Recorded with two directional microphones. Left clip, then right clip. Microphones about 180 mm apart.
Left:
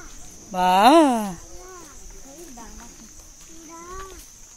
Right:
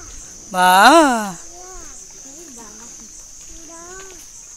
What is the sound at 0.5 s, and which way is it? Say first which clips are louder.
Speech: right 5 dB; centre (ahead or behind).